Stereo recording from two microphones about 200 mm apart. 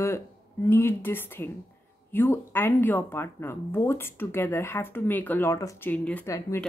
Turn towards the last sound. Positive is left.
turn(degrees=15)  # may be behind; listen again after turning